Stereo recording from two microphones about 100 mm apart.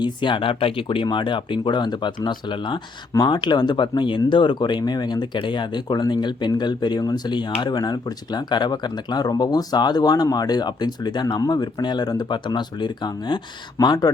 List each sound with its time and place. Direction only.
0.0 s speech: 50° left (ahead or behind)